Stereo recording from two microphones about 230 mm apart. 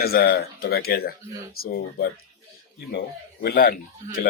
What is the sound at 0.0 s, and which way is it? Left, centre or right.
Speech, left.